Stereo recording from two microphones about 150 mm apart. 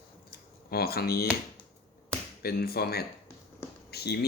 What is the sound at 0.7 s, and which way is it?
Speech, 90° left.